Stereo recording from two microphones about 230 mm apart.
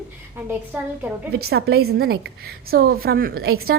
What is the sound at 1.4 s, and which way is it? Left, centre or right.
A woman's voice, right.